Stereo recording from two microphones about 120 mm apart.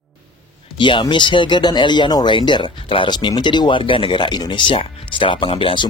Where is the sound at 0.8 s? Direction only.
40° left (ahead or behind).